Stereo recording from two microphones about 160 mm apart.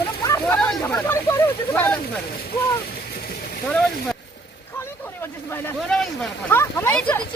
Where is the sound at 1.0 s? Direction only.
15° left (ahead or behind).